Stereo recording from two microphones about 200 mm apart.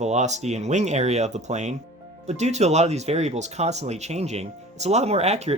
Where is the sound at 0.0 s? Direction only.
35° right (ahead or behind).